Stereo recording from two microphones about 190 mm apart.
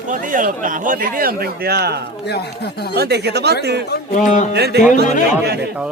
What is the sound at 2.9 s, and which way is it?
Speech, 60° right (ahead or behind).